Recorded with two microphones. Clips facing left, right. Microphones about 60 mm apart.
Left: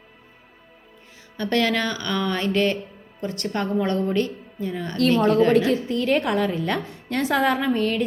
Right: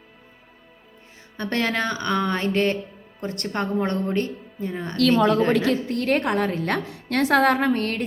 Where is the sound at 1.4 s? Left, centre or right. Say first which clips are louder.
Left 2 dB; right.